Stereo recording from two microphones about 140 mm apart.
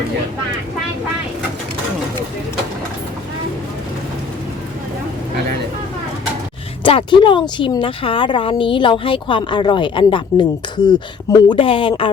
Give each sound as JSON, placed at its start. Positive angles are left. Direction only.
{"t": 6.8, "sound": "speech", "side_deg": 35}